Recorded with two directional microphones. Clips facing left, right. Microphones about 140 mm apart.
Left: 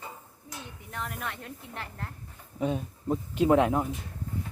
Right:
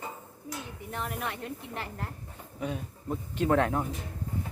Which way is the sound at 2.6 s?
25° left (ahead or behind).